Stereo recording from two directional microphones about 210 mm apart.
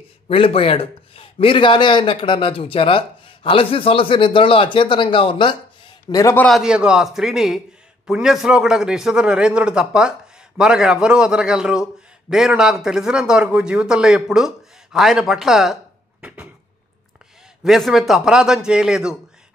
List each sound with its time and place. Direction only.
0.3 s a man's voice: 25° left (ahead or behind); by 16.4 s 5° right (ahead or behind)
17.6 s a man's voice: centre (ahead or behind)